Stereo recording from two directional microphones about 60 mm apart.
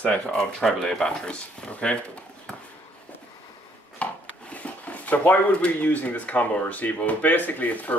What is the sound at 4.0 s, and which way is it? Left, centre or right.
Speech, left.